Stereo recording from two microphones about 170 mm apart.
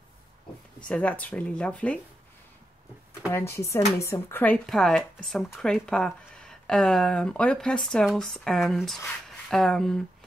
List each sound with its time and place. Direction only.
0.8 s speech: 5° left (ahead or behind)
3.3 s a woman's voice: 15° left (ahead or behind)